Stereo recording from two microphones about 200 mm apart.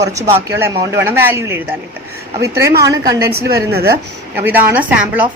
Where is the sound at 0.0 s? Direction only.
15° right (ahead or behind).